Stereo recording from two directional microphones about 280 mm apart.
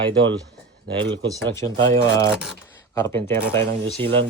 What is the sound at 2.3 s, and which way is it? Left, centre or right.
Speech, centre.